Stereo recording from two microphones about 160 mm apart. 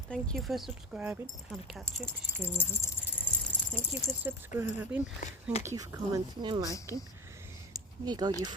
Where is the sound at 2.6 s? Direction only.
15° left (ahead or behind).